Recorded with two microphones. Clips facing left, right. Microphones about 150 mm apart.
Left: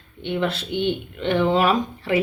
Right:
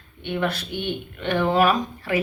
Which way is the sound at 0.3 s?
25° left (ahead or behind).